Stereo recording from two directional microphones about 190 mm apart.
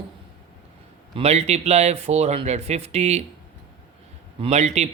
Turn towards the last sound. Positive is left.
turn(degrees=-35)  # may be behind; listen again after turning